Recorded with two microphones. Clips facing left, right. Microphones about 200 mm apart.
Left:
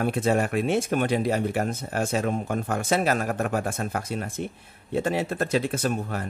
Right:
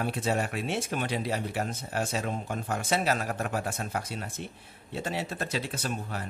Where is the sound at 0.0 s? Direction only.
55° left (ahead or behind).